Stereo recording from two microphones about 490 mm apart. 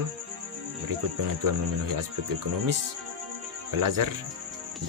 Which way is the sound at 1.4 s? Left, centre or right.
Right.